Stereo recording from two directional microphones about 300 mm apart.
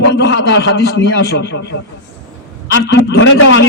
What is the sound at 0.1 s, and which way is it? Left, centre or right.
A man's voice, left.